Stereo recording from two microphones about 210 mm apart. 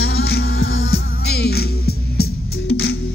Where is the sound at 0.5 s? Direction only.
70° left (ahead or behind).